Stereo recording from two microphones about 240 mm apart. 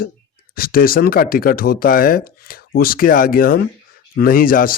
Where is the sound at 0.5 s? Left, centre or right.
Left.